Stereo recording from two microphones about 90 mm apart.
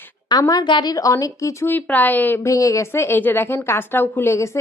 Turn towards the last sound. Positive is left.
turn(degrees=30)  # may be behind; listen again after turning